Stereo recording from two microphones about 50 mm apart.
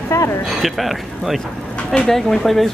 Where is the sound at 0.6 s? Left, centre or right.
Centre.